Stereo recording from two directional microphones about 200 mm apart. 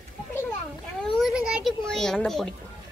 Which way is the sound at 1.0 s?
Centre (ahead or behind).